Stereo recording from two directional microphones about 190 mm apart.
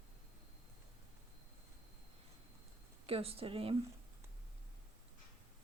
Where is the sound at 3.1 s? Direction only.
30° right (ahead or behind).